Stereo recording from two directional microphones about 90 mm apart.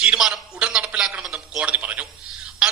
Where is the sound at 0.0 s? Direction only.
10° right (ahead or behind).